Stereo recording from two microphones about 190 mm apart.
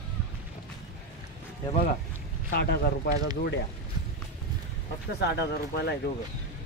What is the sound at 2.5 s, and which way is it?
Speech, 55° left (ahead or behind).